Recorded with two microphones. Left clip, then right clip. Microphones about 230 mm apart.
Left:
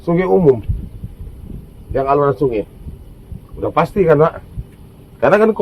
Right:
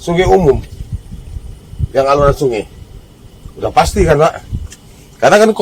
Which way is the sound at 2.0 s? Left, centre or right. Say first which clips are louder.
Right 4 dB; right.